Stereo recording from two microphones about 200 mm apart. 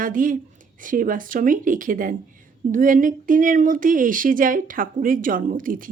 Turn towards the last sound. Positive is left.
turn(degrees=-40)  # may be behind; listen again after turning